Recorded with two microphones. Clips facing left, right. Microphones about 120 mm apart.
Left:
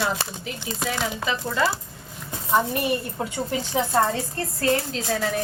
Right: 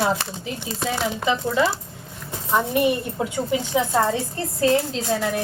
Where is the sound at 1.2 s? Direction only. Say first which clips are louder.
Right 4 dB; 25° right (ahead or behind).